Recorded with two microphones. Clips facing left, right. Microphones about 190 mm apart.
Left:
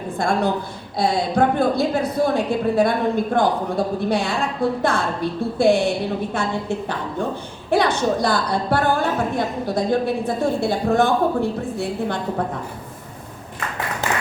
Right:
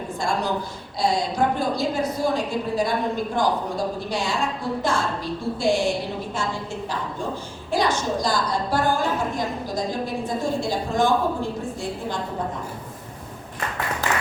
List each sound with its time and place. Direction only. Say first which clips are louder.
0.2 s a woman's voice: left 5 dB; 55° left (ahead or behind)